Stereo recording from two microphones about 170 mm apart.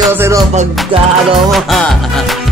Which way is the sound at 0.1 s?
15° right (ahead or behind).